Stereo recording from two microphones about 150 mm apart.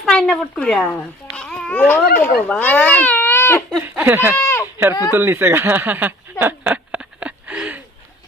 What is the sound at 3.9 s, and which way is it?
Speech, 15° right (ahead or behind).